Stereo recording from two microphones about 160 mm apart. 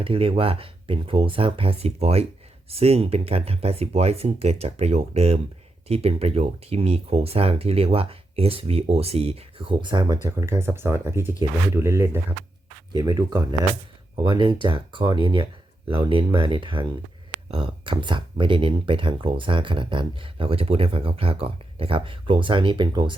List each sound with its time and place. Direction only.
0.0 s speech: 35° right (ahead or behind)
10.3 s speech: 15° right (ahead or behind)